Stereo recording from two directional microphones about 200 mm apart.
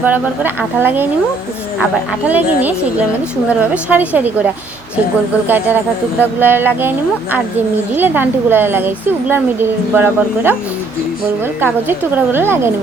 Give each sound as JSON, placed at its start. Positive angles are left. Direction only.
{"t": 0.0, "sound": "speech", "side_deg": -10}
{"t": 2.2, "sound": "speech", "side_deg": -10}
{"t": 5.5, "sound": "speech", "side_deg": -10}
{"t": 7.9, "sound": "speech", "side_deg": -10}
{"t": 11.6, "sound": "speech", "side_deg": -10}